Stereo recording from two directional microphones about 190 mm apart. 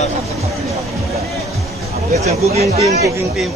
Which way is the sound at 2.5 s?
35° right (ahead or behind).